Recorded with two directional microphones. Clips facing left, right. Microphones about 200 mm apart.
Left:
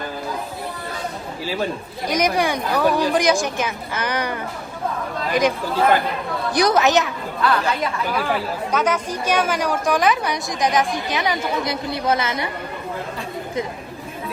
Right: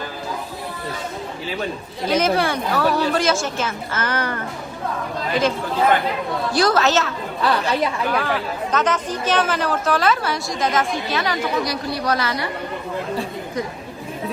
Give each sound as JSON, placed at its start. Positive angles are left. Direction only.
{"t": 2.0, "sound": "a woman's voice", "side_deg": 15}